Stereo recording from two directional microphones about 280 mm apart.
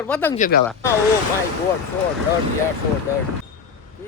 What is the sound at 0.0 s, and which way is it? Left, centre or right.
Speech, centre.